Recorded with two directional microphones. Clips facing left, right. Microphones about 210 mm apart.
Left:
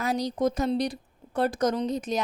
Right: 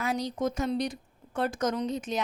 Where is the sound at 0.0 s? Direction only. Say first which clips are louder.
Left 4 dB; 40° left (ahead or behind).